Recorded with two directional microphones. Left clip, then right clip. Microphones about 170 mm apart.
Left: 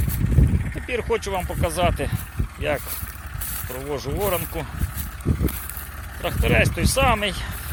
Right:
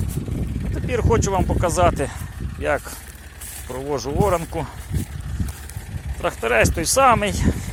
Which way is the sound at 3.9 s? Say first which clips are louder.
Right 4 dB; 40° right (ahead or behind).